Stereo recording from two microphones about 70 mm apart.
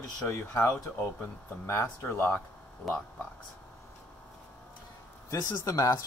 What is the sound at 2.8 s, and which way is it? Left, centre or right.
Speech, centre.